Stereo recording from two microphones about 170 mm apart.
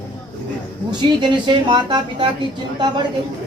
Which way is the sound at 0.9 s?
25° right (ahead or behind).